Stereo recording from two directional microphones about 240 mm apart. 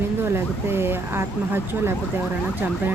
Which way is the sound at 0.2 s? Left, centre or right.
Centre.